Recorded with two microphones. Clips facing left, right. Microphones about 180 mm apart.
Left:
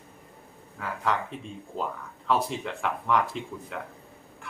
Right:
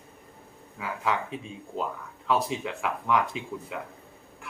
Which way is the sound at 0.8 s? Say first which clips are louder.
Even; 5° right (ahead or behind).